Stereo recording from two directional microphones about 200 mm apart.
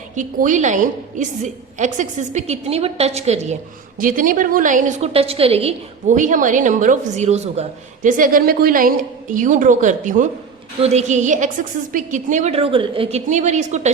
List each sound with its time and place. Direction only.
0.2 s a woman's voice: 40° right (ahead or behind)
3.9 s a woman's voice: 45° right (ahead or behind)